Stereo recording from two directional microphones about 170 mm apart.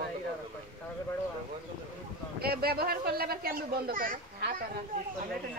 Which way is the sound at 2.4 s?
65° right (ahead or behind).